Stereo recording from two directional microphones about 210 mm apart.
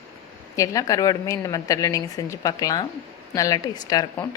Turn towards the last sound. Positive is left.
turn(degrees=20)  # may be behind; listen again after turning